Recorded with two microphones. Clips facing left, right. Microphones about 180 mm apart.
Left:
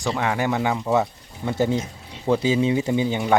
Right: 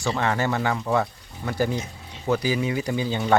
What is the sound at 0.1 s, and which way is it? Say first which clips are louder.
Speech: left 1 dB; 10° left (ahead or behind).